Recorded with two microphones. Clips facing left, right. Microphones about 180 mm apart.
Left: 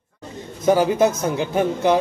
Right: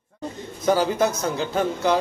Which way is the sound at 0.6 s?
20° left (ahead or behind).